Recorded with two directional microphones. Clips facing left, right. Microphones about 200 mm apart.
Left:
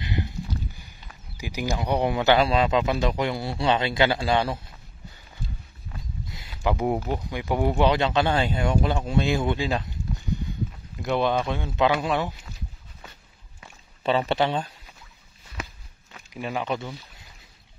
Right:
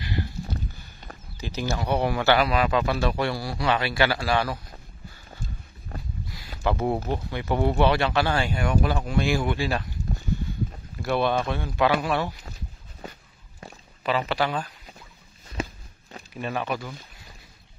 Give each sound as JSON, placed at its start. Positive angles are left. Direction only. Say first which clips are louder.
{"t": 0.0, "sound": "clip-clop", "louder": "left 1 dB", "side_deg": 20}
{"t": 1.4, "sound": "speech", "louder": "left 1 dB", "side_deg": 15}
{"t": 5.3, "sound": "clip-clop", "louder": "left 1 dB", "side_deg": -45}
{"t": 6.2, "sound": "a sound", "louder": "right 1 dB", "side_deg": 20}
{"t": 6.6, "sound": "speech", "louder": "left 1 dB", "side_deg": 15}
{"t": 11.0, "sound": "speech", "louder": "even", "side_deg": 20}
{"t": 14.0, "sound": "speech", "louder": "left 2 dB", "side_deg": 25}
{"t": 15.6, "sound": "walk", "louder": "right 7 dB", "side_deg": -25}
{"t": 16.3, "sound": "speech", "louder": "left 1 dB", "side_deg": 15}